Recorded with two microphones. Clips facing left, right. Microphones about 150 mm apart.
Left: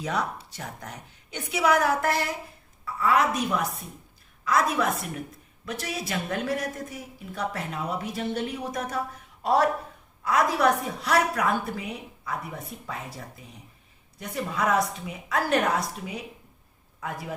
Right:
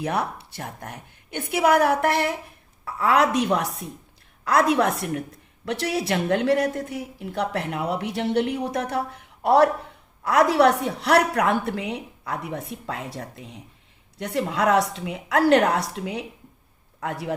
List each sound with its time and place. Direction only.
0.0 s a woman's voice: 60° right (ahead or behind)
2.8 s a woman's voice: 75° right (ahead or behind)